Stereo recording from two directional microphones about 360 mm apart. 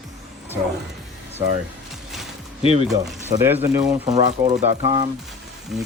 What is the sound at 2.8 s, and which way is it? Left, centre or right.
Speech, centre.